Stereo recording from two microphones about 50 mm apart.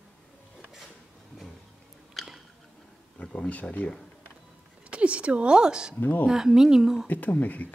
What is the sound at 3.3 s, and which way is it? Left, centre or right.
Speech, left.